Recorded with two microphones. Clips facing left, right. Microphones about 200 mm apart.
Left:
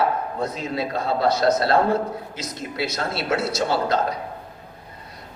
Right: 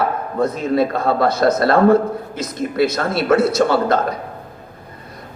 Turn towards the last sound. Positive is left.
turn(degrees=-55)  # may be behind; listen again after turning